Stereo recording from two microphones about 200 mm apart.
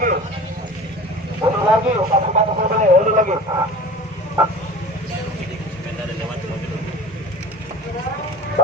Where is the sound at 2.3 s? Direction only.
40° right (ahead or behind).